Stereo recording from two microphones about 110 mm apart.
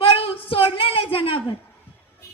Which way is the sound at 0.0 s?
55° left (ahead or behind).